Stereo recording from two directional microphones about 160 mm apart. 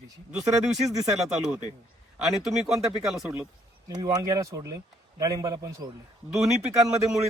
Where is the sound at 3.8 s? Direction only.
20° right (ahead or behind).